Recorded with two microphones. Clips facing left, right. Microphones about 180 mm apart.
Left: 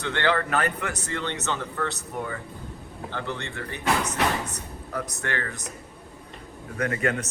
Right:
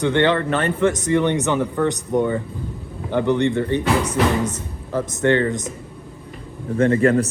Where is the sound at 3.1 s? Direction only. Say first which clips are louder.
Right 16 dB; 20° right (ahead or behind).